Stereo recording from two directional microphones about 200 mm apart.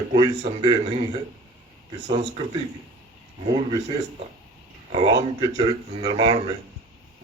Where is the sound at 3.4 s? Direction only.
30° right (ahead or behind).